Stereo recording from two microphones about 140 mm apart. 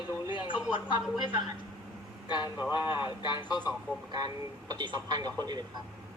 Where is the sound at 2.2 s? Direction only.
30° left (ahead or behind).